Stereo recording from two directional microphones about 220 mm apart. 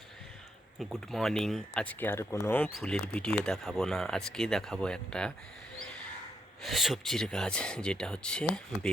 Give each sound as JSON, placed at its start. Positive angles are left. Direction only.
{"t": 0.8, "sound": "speech", "side_deg": 0}
{"t": 6.6, "sound": "speech", "side_deg": 0}